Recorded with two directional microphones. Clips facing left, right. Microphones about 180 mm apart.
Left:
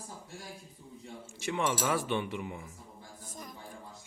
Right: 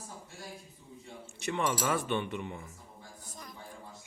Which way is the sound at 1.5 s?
5° left (ahead or behind).